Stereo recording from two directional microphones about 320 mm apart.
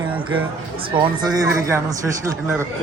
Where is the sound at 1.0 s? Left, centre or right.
Centre.